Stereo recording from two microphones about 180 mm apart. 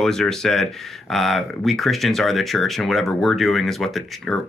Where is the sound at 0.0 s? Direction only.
Centre (ahead or behind).